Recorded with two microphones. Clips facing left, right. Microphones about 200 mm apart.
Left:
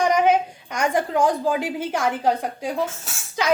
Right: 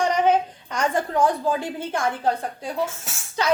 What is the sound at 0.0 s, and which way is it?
A woman's voice, 10° left (ahead or behind).